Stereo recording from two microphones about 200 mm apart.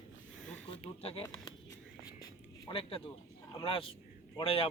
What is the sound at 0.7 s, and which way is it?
Speech, 30° left (ahead or behind).